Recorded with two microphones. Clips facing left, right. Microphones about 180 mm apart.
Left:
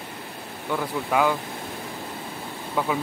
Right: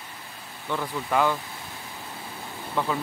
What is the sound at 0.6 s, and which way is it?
Speech, 10° left (ahead or behind).